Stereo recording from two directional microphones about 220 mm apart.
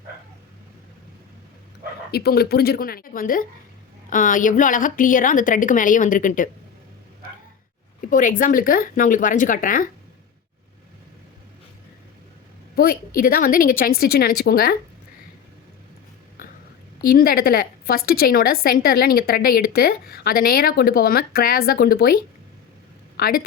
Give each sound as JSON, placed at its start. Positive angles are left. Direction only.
{"t": 2.1, "sound": "a woman's voice", "side_deg": 45}
{"t": 8.1, "sound": "a woman's voice", "side_deg": 35}
{"t": 12.7, "sound": "a woman's voice", "side_deg": 45}
{"t": 16.4, "sound": "whispering", "side_deg": 40}
{"t": 17.1, "sound": "a woman's voice", "side_deg": 40}